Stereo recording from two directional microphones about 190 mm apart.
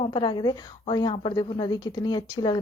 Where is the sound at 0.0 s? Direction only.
25° left (ahead or behind).